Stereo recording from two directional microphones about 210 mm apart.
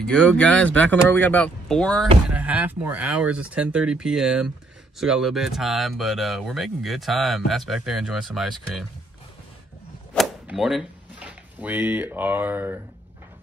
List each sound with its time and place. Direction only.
0.0 s speech: 5° left (ahead or behind)
10.1 s speech: centre (ahead or behind)